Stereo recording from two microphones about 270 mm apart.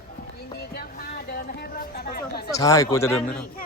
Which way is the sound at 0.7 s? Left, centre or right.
Left.